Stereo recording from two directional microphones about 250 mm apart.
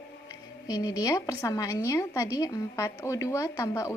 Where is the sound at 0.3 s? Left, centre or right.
Centre.